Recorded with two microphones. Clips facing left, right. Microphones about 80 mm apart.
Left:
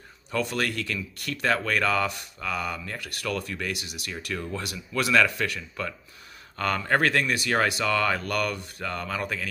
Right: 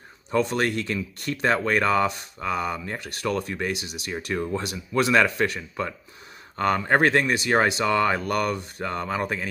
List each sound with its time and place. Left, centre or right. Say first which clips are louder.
0.3 s speech: right 5 dB; right